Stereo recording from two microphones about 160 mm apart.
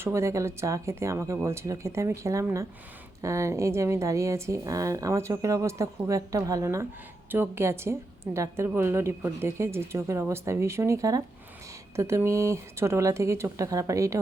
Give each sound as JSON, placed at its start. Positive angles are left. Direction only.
{"t": 0.0, "sound": "a woman's voice", "side_deg": -15}